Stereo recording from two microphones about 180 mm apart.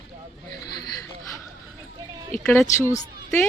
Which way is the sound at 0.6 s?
25° left (ahead or behind).